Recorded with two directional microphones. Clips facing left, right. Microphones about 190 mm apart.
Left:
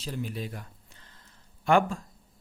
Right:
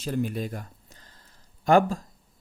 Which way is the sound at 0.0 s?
50° right (ahead or behind).